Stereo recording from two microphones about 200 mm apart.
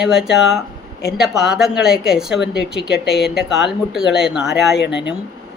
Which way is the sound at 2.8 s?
60° left (ahead or behind).